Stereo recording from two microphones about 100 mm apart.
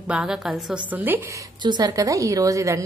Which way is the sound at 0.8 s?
20° right (ahead or behind).